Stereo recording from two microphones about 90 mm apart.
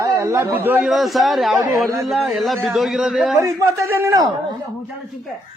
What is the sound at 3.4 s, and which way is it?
Speech, 35° right (ahead or behind).